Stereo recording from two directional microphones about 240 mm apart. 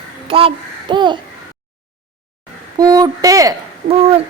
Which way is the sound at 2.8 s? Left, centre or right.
Centre.